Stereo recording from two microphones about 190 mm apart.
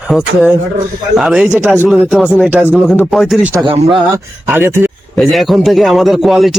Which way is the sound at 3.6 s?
30° right (ahead or behind).